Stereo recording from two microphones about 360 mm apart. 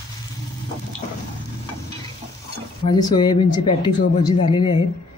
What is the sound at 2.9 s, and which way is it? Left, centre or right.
Speech, centre.